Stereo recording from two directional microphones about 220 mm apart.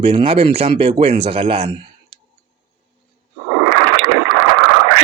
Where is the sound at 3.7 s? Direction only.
60° right (ahead or behind).